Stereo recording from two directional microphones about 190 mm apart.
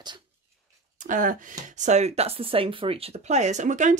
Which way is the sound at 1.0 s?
45° right (ahead or behind).